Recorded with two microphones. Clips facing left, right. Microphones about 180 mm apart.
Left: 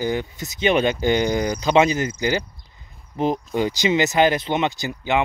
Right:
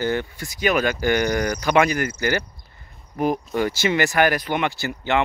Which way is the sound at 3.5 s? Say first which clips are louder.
Left 3 dB; 15° left (ahead or behind).